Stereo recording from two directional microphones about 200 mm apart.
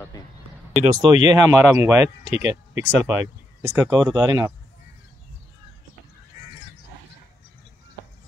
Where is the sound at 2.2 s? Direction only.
35° left (ahead or behind).